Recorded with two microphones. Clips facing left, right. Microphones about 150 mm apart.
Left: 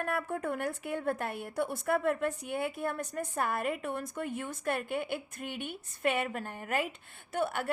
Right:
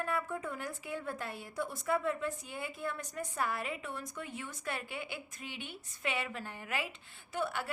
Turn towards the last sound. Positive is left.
turn(degrees=55)  # may be behind; listen again after turning